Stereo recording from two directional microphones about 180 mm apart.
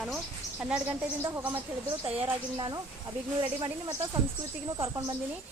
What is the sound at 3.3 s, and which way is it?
Speech, 25° right (ahead or behind).